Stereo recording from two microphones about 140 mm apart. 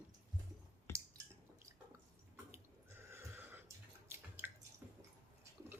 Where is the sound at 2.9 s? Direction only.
15° right (ahead or behind).